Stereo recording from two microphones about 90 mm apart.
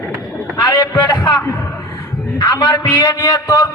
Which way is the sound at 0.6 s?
45° left (ahead or behind).